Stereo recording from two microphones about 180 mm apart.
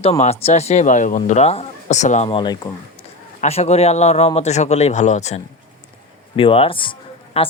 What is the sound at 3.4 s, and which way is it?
A man's voice, 35° left (ahead or behind).